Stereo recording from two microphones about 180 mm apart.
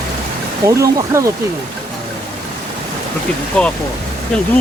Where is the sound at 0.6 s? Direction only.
15° right (ahead or behind).